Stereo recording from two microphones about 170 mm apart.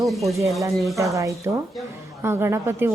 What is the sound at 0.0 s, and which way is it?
Speech, centre (ahead or behind).